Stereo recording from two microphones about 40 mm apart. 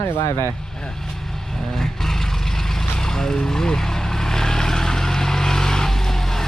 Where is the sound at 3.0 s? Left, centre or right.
Centre.